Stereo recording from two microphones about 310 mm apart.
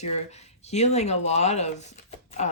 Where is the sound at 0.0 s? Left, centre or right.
Left.